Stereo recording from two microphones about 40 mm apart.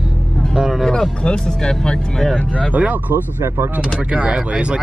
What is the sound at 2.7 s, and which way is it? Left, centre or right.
Speech, right.